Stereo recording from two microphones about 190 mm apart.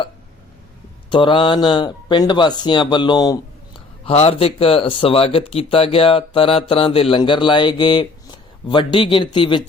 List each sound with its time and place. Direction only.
1.1 s speech: 25° left (ahead or behind)
4.0 s speech: 30° left (ahead or behind)